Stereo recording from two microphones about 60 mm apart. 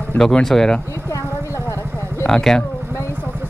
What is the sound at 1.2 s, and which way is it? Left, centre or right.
Vehicle, left.